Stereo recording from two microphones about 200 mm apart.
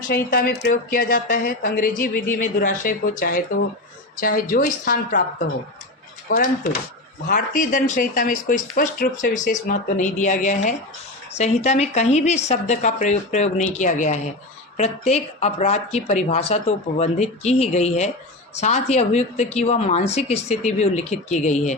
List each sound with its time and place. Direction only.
0.1 s a woman's voice: 50° left (ahead or behind)
6.2 s speech: 45° left (ahead or behind)